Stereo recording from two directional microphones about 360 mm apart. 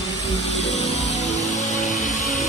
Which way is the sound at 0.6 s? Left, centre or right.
Centre.